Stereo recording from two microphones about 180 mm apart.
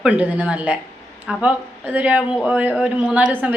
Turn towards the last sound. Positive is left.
turn(degrees=-5)  # may be behind; listen again after turning